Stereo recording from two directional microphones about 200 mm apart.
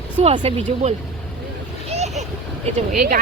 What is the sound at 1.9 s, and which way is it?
Vehicle, 35° right (ahead or behind).